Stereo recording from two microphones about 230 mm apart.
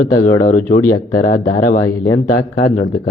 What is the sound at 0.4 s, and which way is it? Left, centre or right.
Speech, left.